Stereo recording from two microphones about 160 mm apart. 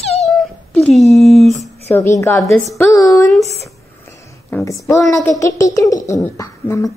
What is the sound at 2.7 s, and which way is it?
Speech, 20° left (ahead or behind).